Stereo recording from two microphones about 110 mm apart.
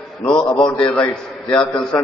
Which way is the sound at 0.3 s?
5° left (ahead or behind).